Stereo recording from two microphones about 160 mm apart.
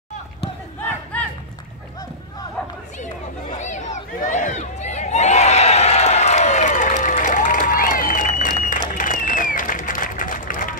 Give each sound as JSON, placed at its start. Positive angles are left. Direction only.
{"t": 3.5, "sound": "a sound", "side_deg": 50}
{"t": 8.3, "sound": "applause", "side_deg": 55}
{"t": 8.9, "sound": "run", "side_deg": 55}